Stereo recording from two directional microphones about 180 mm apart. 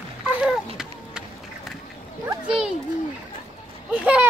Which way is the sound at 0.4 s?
5° right (ahead or behind).